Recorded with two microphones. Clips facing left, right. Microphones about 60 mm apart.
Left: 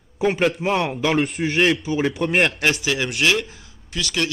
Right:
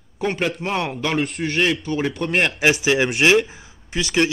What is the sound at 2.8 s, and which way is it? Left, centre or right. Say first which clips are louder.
Speech: right 4 dB; right.